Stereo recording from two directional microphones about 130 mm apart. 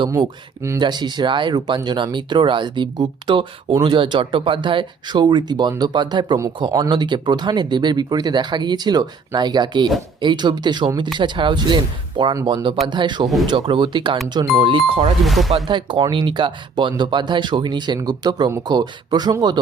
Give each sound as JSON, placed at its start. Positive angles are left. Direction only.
{"t": 0.8, "sound": "speech", "side_deg": -35}
{"t": 15.2, "sound": "speech", "side_deg": 0}
{"t": 15.6, "sound": "speech", "side_deg": -35}